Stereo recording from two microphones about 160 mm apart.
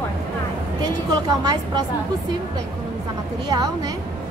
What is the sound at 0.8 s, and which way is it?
A woman's voice, 25° right (ahead or behind).